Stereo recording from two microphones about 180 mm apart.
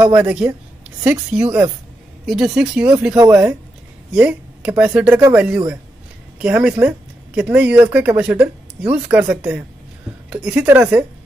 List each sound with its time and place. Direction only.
0.0 s speech: 10° right (ahead or behind)